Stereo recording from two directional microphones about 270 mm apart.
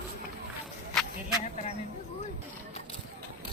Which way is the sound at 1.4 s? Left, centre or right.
Left.